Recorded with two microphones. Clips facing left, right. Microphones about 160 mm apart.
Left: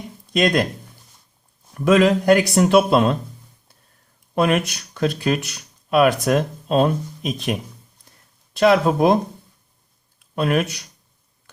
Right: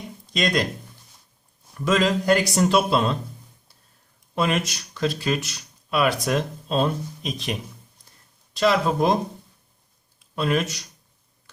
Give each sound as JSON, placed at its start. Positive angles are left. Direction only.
{"t": 0.3, "sound": "speech", "side_deg": 55}
{"t": 1.8, "sound": "speech", "side_deg": 55}
{"t": 4.4, "sound": "speech", "side_deg": 60}
{"t": 10.2, "sound": "speech", "side_deg": 55}